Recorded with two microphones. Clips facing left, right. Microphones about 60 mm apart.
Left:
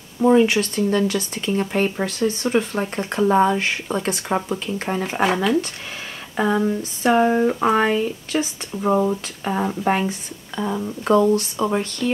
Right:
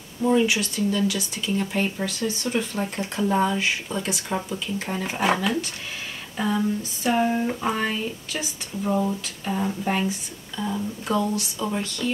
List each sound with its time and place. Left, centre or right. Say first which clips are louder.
0.2 s speech: left 5 dB; left
6.3 s speech: left 5 dB; left